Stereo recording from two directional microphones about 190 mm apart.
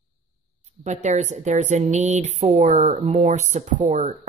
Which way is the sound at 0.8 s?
40° right (ahead or behind).